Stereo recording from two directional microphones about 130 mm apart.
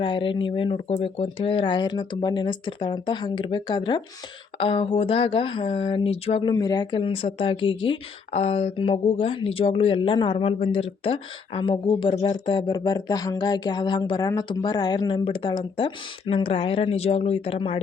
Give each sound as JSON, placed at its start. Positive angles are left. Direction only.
{"t": 0.0, "sound": "speech", "side_deg": 40}
{"t": 4.5, "sound": "speech", "side_deg": 45}
{"t": 6.5, "sound": "speech", "side_deg": 30}
{"t": 8.3, "sound": "speech", "side_deg": 55}